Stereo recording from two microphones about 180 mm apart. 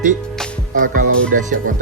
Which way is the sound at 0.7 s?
50° right (ahead or behind).